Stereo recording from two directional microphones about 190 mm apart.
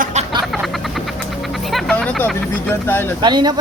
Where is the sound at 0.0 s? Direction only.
35° right (ahead or behind).